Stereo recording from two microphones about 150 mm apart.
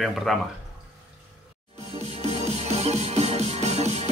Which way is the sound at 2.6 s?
45° right (ahead or behind).